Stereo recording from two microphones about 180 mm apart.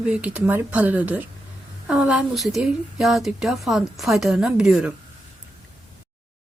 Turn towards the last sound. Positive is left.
turn(degrees=-5)  # may be behind; listen again after turning